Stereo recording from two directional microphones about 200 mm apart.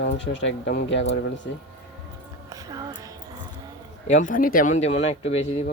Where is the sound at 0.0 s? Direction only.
65° left (ahead or behind).